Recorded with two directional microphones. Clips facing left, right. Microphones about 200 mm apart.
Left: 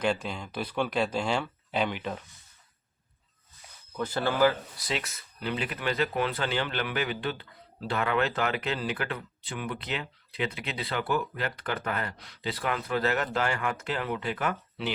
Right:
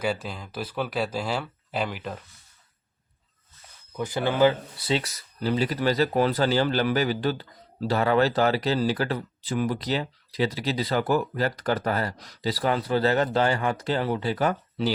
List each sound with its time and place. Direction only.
0.0 s speech: 5° right (ahead or behind)
3.9 s speech: 15° right (ahead or behind); by 14.9 s 35° right (ahead or behind)